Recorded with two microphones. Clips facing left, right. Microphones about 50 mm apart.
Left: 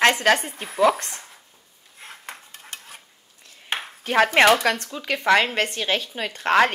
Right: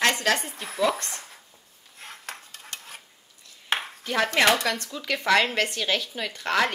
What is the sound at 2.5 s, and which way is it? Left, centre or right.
Stir, left.